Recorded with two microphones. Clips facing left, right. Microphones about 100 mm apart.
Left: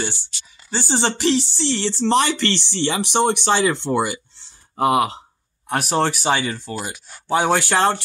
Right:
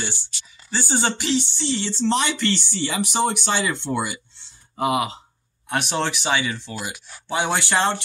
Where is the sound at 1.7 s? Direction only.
60° left (ahead or behind).